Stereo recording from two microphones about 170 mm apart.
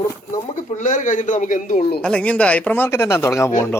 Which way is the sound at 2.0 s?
5° left (ahead or behind).